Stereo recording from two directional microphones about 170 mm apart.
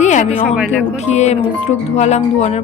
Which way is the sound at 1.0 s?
40° left (ahead or behind).